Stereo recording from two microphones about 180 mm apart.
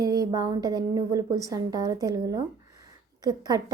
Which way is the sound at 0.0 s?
20° right (ahead or behind).